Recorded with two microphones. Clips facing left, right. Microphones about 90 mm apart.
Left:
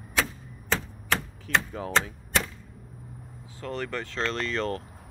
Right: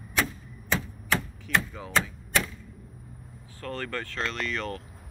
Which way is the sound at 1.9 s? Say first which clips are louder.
Even; 30° left (ahead or behind).